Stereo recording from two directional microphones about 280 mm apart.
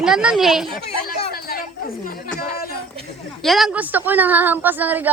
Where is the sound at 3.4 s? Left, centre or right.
Centre.